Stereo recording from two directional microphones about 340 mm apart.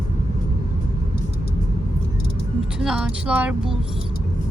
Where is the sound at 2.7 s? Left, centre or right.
Centre.